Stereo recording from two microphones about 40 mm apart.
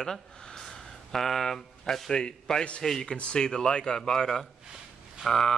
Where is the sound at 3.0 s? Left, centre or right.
Left; by 5.5 s centre.